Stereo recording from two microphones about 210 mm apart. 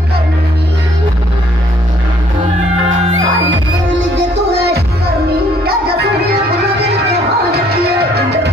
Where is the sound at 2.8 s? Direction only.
65° right (ahead or behind).